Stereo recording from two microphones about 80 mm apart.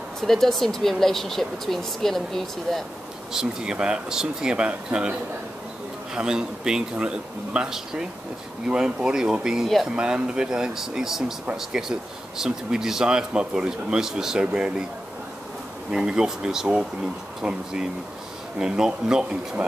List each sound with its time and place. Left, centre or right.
0.3 s speech: centre
3.3 s speech: centre
6.1 s speech: centre
15.9 s speech: centre